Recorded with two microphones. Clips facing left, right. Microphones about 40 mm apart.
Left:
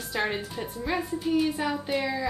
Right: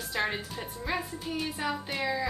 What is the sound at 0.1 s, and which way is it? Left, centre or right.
A woman's voice, centre.